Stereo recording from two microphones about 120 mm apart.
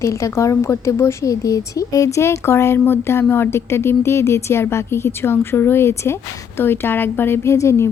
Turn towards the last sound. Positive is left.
turn(degrees=25)  # may be behind; listen again after turning